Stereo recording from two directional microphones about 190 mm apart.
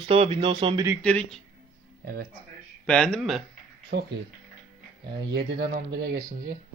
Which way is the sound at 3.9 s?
60° right (ahead or behind).